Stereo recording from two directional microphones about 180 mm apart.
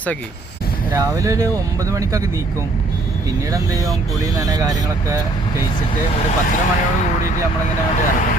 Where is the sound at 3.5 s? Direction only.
20° right (ahead or behind).